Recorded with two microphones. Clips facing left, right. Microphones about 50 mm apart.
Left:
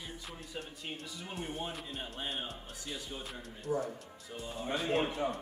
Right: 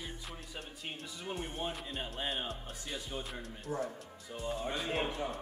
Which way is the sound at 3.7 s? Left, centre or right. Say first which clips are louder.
Left 3 dB; centre.